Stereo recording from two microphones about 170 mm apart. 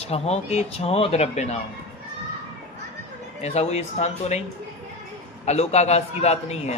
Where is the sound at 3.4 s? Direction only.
40° left (ahead or behind).